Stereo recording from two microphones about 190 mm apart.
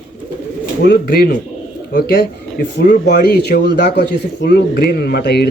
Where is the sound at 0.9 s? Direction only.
55° left (ahead or behind).